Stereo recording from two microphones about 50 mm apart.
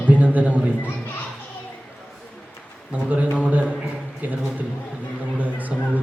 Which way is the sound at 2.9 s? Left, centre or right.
Right.